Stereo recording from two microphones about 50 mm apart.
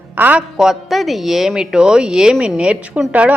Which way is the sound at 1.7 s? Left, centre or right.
Centre.